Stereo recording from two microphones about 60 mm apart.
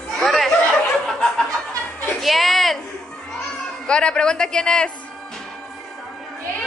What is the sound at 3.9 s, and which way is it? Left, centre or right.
A man's voice, centre.